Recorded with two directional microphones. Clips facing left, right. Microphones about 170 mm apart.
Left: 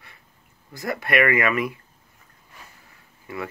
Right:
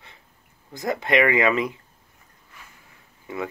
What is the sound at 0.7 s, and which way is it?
Speech, 20° right (ahead or behind).